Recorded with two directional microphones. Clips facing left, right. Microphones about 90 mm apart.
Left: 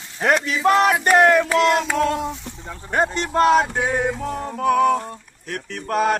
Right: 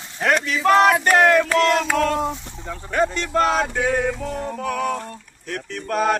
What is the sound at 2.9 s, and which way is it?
Speech, 35° left (ahead or behind).